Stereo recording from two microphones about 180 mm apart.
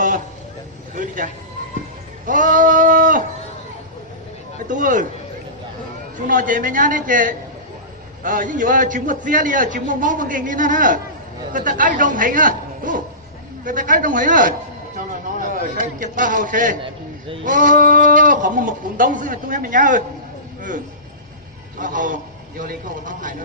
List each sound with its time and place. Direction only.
0.9 s a man's voice: 45° right (ahead or behind)
2.2 s sheep: 50° right (ahead or behind)
4.7 s a man's voice: 45° right (ahead or behind)
6.2 s a man's voice: 50° right (ahead or behind)
16.8 s a man's voice: 30° right (ahead or behind)
17.4 s a man's voice: 50° right (ahead or behind)
20.6 s a sound: 45° right (ahead or behind)
21.8 s a man's voice: 45° right (ahead or behind)